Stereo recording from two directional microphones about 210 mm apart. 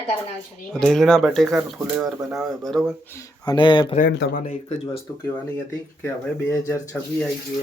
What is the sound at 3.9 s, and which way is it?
Speech, 45° left (ahead or behind).